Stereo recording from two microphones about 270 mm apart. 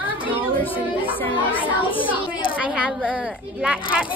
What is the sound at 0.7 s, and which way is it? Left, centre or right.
A child's voice, centre.